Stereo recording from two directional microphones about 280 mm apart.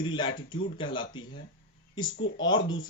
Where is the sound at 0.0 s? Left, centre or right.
Centre.